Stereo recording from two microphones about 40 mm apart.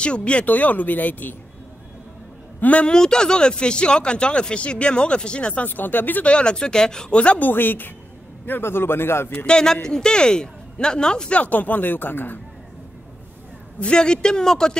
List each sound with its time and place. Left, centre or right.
0.0 s speech: left
0.5 s speech: left
2.6 s a man's voice: left
2.9 s speech: centre
5.7 s speech: left
6.2 s speech: left
7.3 s speech: left
8.5 s a man's voice: left
9.5 s speech: centre
11.3 s speech: left
13.7 s speech: left